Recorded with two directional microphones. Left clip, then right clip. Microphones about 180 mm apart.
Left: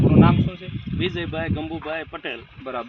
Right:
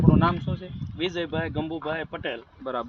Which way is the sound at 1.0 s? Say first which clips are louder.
Left 2 dB; 35° right (ahead or behind).